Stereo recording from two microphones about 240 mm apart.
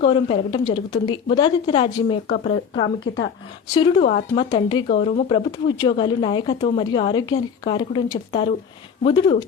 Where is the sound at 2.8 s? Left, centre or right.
Left.